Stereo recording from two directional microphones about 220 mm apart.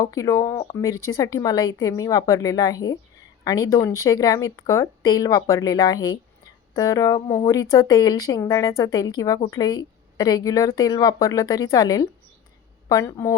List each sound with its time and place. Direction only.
0.0 s speech: 15° left (ahead or behind)